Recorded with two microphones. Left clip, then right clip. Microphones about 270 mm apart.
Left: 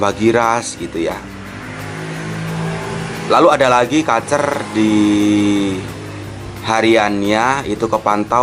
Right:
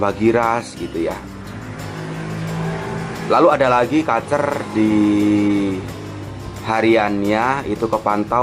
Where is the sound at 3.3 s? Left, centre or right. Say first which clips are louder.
Left 3 dB; centre.